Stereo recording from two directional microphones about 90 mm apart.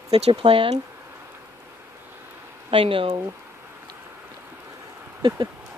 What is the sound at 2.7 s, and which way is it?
Speech, 85° right.